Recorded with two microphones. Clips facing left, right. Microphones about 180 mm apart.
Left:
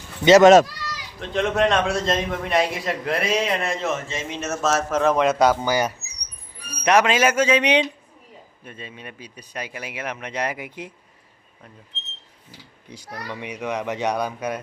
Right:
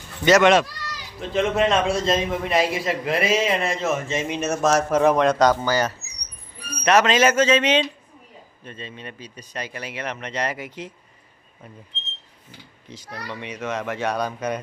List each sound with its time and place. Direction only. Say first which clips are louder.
0.3 s speech: left 5 dB; 35° left (ahead or behind)
1.2 s a man's voice: even; centre (ahead or behind)
3.9 s a man's voice: right 4 dB; 20° right (ahead or behind)
5.1 s speech: even; 5° left (ahead or behind)
12.9 s speech: left 1 dB; 10° left (ahead or behind)